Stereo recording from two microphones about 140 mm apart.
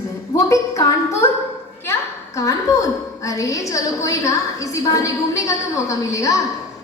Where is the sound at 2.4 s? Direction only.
20° left (ahead or behind).